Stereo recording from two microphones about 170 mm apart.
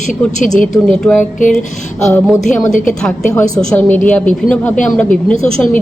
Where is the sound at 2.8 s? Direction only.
5° left (ahead or behind).